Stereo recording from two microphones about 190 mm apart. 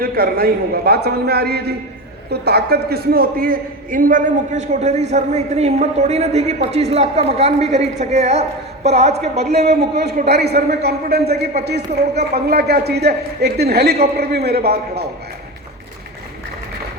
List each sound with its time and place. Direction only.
0.0 s a man's voice: 50° right (ahead or behind); by 9.4 s 35° right (ahead or behind)
9.4 s a man's voice: 55° right (ahead or behind)